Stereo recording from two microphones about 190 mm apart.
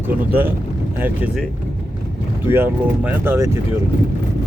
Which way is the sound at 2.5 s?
10° right (ahead or behind).